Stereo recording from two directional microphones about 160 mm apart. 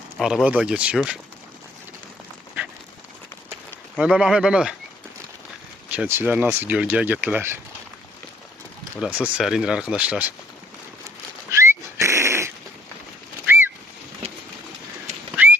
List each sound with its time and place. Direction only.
0.2 s speech: centre (ahead or behind)
3.9 s speech: 5° right (ahead or behind)
5.9 s speech: 10° right (ahead or behind)
9.0 s speech: 10° right (ahead or behind)
11.5 s dog: 15° right (ahead or behind)
15.1 s bird: 45° right (ahead or behind)